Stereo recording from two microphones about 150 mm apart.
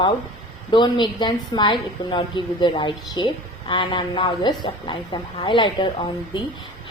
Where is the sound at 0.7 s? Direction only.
30° left (ahead or behind).